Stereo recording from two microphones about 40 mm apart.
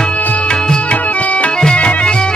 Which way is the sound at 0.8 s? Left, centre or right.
Left.